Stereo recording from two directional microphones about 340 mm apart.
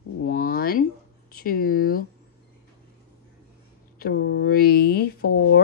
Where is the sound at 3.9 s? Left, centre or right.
Left.